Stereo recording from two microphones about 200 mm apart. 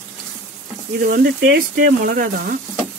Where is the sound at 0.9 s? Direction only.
50° right (ahead or behind).